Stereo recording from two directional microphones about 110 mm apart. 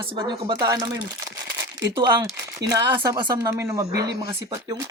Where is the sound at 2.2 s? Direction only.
35° right (ahead or behind).